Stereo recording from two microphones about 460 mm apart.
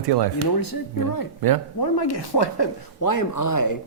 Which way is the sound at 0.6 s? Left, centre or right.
Left.